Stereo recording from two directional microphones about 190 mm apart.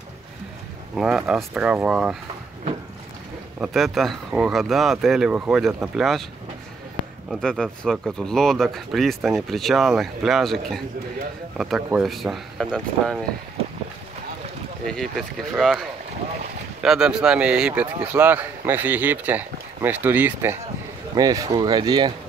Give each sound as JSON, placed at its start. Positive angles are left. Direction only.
{"t": 0.9, "sound": "speech", "side_deg": -5}
{"t": 3.6, "sound": "speech", "side_deg": 0}
{"t": 7.2, "sound": "speech", "side_deg": 5}
{"t": 14.9, "sound": "speech", "side_deg": 0}
{"t": 16.8, "sound": "speech", "side_deg": -5}